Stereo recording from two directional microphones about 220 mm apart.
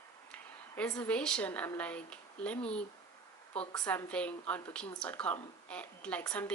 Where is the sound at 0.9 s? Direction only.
5° left (ahead or behind).